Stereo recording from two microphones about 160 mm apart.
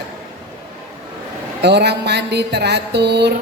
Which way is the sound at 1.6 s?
90° right.